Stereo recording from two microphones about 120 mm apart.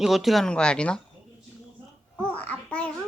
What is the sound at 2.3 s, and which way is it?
Babbling, 10° left (ahead or behind).